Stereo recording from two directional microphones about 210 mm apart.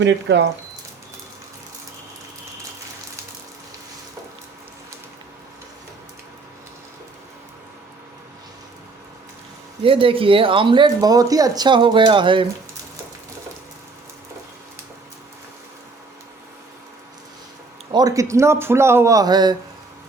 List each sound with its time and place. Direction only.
0.0 s speech: 55° right (ahead or behind)
9.8 s speech: 25° right (ahead or behind)
17.9 s speech: 15° right (ahead or behind)